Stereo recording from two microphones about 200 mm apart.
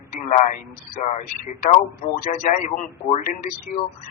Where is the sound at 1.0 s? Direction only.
35° left (ahead or behind).